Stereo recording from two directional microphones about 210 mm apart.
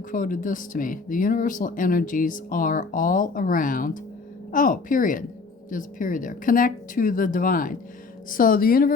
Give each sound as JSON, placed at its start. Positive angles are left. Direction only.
{"t": 0.1, "sound": "speech", "side_deg": 40}